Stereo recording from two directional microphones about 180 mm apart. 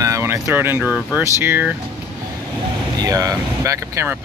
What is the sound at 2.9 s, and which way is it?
Speech, 20° right (ahead or behind).